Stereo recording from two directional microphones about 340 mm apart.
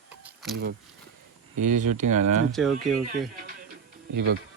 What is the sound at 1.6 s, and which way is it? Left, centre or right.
Speech, right.